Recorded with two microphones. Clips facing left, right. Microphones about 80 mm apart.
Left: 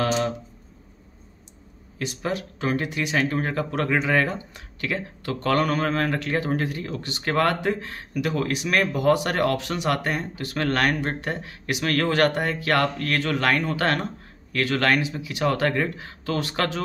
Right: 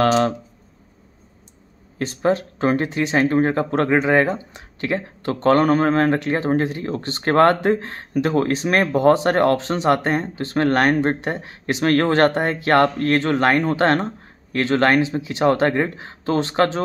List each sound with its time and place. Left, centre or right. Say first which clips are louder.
0.0 s speech: right 7 dB; right
2.0 s speech: right 8 dB; right